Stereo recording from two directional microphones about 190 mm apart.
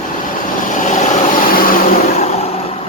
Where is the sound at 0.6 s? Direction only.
40° left (ahead or behind).